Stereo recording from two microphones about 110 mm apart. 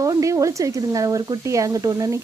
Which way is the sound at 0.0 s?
30° right (ahead or behind).